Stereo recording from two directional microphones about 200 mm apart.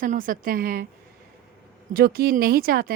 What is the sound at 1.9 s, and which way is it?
Speech, 50° right (ahead or behind).